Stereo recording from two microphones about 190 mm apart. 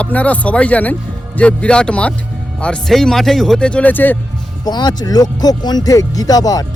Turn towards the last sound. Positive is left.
turn(degrees=20)  # may be behind; listen again after turning